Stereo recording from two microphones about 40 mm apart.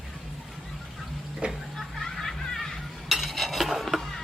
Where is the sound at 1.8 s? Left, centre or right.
Centre.